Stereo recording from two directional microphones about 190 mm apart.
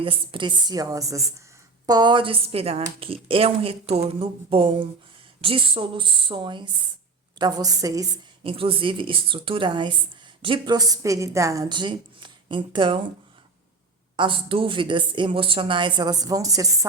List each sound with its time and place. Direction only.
0.0 s a woman's voice: 25° right (ahead or behind)
8.4 s a woman's voice: 30° right (ahead or behind)
14.2 s a woman's voice: 25° right (ahead or behind)